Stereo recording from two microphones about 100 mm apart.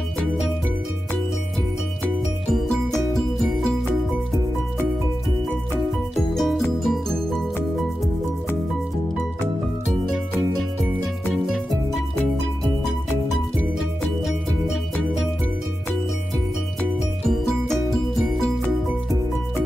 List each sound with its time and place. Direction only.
2.5 s music: centre (ahead or behind)
6.1 s music: centre (ahead or behind)
11.4 s music: centre (ahead or behind)
13.7 s music: 5° right (ahead or behind)
17.3 s music: 5° left (ahead or behind)